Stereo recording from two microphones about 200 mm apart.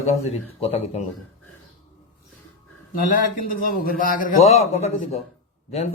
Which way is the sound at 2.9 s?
45° left (ahead or behind).